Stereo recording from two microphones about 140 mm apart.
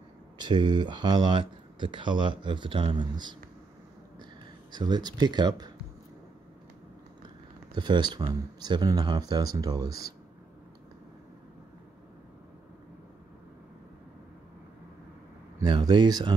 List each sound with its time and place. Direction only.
0.4 s speech: 30° right (ahead or behind)
4.7 s speech: 30° right (ahead or behind)
7.7 s speech: 30° right (ahead or behind)
15.6 s speech: 30° right (ahead or behind)